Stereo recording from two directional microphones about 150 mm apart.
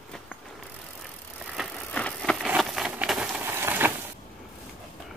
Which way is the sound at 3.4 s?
15° right (ahead or behind).